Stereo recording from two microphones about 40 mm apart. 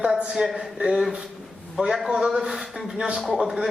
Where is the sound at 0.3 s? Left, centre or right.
Centre.